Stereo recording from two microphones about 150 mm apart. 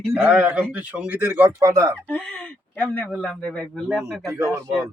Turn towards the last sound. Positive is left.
turn(degrees=-20)  # may be behind; listen again after turning